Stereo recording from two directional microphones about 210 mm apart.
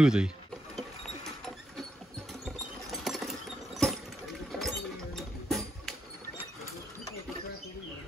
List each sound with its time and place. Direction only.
0.0 s speech: 5° right (ahead or behind)
2.4 s patter: centre (ahead or behind)
4.5 s a sound: centre (ahead or behind)